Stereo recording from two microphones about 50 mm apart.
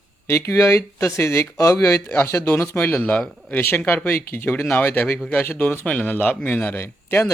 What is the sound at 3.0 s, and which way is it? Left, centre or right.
Speech, left.